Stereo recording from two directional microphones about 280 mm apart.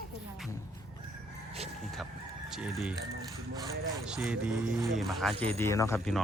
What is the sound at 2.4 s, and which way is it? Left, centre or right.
Speech, centre.